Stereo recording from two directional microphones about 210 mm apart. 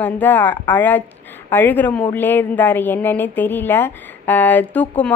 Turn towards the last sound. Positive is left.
turn(degrees=10)  # may be behind; listen again after turning